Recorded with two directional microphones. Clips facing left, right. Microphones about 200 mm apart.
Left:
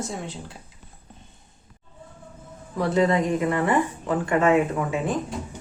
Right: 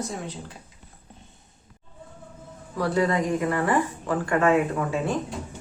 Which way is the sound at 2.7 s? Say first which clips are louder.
Left 2 dB; 20° left (ahead or behind).